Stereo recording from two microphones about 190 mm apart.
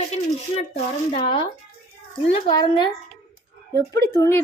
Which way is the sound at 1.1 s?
25° left (ahead or behind).